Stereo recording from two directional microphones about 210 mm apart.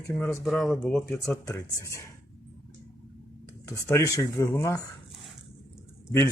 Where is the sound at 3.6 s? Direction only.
15° left (ahead or behind).